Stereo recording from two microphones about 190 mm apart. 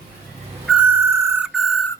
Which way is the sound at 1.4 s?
Centre (ahead or behind).